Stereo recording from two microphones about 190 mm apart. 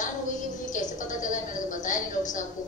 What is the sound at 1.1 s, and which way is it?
Speech, 45° left (ahead or behind).